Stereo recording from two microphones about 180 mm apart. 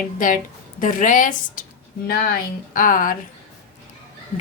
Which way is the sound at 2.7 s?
50° left (ahead or behind).